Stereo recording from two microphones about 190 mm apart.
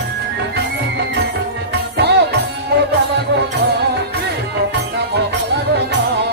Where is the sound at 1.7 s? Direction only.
60° right (ahead or behind).